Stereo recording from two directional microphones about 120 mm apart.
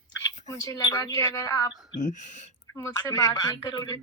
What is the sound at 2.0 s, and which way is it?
Speech, 85° left.